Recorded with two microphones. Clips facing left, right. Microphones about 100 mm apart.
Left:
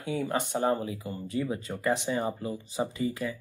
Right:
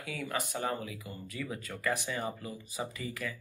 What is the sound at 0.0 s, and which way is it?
Speech, 30° left (ahead or behind).